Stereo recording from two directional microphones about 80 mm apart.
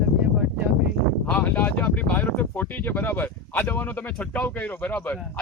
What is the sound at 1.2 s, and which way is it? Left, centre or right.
Speech, centre.